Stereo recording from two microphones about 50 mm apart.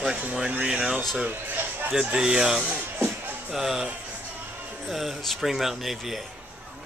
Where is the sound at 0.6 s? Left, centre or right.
Centre.